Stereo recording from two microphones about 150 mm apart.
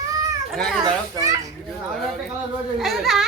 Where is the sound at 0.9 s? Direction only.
25° right (ahead or behind).